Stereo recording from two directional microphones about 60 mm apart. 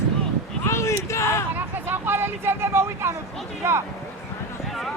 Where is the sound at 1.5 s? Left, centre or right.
Right.